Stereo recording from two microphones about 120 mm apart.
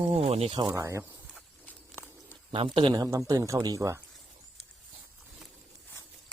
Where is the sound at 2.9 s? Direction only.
30° right (ahead or behind).